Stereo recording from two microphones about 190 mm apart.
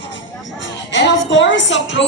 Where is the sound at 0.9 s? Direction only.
70° left (ahead or behind).